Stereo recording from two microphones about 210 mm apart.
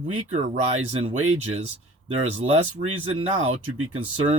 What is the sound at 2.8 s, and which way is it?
Speech, 40° right (ahead or behind).